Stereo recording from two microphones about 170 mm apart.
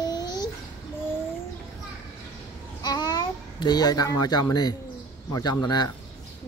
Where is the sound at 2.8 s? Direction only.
25° left (ahead or behind).